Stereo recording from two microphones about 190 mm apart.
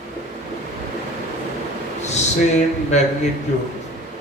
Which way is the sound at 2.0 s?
35° left (ahead or behind).